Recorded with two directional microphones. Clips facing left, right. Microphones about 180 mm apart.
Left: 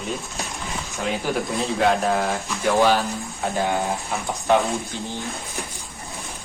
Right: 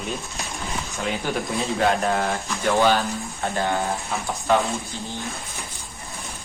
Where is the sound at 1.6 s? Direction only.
Centre (ahead or behind).